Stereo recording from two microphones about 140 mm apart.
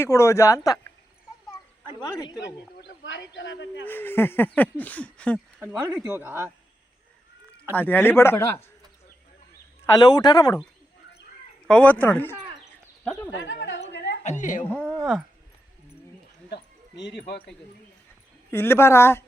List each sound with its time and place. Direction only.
0.0 s speech: 20° left (ahead or behind)
3.8 s speech: 15° left (ahead or behind)
6.1 s speech: 15° right (ahead or behind)
7.7 s speech: 15° left (ahead or behind)
9.8 s speech: 30° left (ahead or behind)
11.7 s speech: 10° left (ahead or behind)
13.8 s a sound: 60° left (ahead or behind)
14.7 s speech: 10° left (ahead or behind)
18.5 s speech: 15° left (ahead or behind)